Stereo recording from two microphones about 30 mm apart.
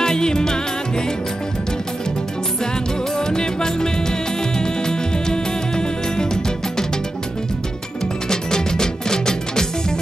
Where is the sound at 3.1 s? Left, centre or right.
Left.